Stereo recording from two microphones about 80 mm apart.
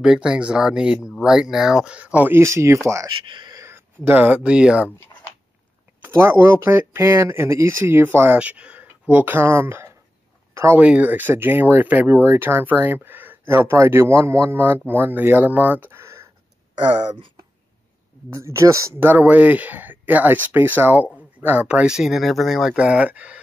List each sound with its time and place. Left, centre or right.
0.0 s speech: centre
2.3 s speech: right
3.3 s speech: right
3.5 s a sound: right
4.0 s speech: centre
6.0 s speech: right
8.4 s speech: centre
10.5 s a sound: right
10.8 s speech: centre
18.3 s speech: right
18.9 s speech: right; by 22.8 s centre
22.8 s speech: centre